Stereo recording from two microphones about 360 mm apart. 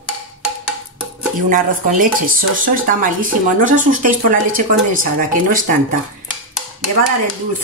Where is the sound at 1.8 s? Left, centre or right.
Right.